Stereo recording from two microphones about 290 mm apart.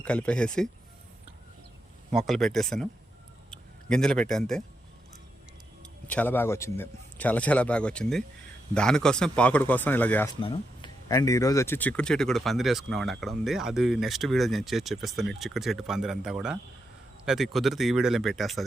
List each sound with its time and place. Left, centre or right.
0.0 s speech: centre
2.1 s speech: centre
6.1 s speech: centre